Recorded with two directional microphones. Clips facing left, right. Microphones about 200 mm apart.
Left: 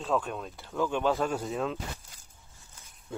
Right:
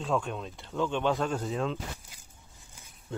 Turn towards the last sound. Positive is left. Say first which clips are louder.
# right 1 dB
turn(degrees=10)  # may be behind; listen again after turning